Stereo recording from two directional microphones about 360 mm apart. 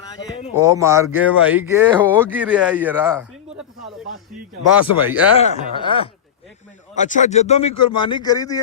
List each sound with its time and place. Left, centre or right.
0.6 s speech: centre
4.8 s speech: left
5.4 s speech: centre
7.7 s speech: left
8.0 s speech: centre